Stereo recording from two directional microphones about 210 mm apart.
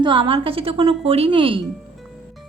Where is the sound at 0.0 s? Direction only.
25° right (ahead or behind).